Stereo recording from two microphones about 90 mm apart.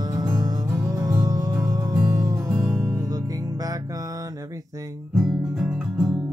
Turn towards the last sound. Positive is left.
turn(degrees=-5)  # may be behind; listen again after turning